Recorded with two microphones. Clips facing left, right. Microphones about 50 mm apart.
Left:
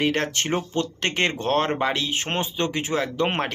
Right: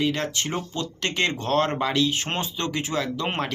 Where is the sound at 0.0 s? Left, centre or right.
Left.